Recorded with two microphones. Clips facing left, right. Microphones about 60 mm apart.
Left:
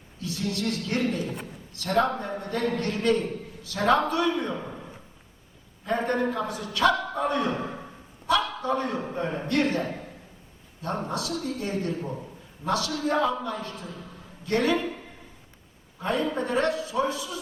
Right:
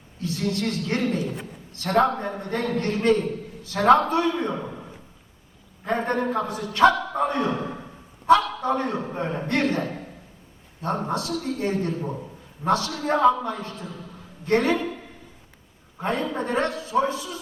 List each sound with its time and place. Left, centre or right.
0.2 s a man's voice: right
5.8 s a man's voice: right
10.8 s a man's voice: right
16.0 s a man's voice: right